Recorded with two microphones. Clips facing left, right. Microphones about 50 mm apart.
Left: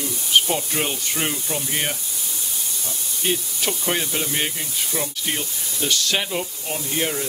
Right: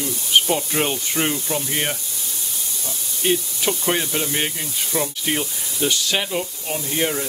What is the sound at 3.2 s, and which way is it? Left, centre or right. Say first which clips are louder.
Speech: right 4 dB; centre.